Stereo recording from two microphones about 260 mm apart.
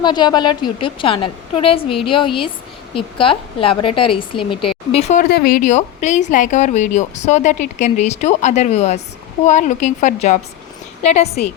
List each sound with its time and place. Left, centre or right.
0.0 s speech: centre
5.3 s speech: left